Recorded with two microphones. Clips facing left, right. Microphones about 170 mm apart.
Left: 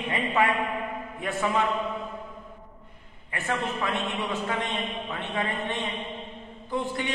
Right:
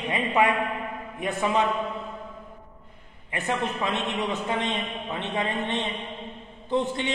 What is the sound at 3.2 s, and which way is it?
A man's voice, 20° right (ahead or behind).